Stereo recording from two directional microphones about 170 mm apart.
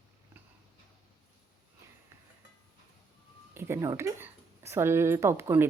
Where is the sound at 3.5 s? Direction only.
15° right (ahead or behind).